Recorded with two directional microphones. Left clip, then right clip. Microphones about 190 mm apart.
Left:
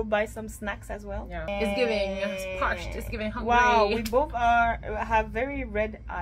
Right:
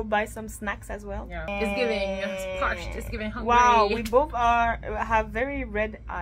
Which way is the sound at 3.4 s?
15° right (ahead or behind).